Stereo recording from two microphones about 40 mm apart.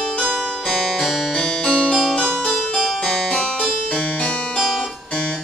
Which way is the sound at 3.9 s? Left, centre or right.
Left.